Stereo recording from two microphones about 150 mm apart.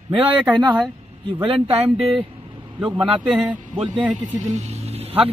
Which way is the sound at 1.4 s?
40° right (ahead or behind).